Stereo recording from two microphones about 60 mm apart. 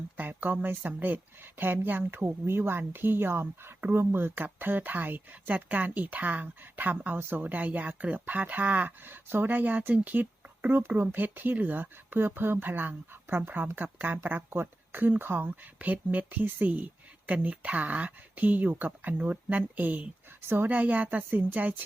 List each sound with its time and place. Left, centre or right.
0.2 s speech: right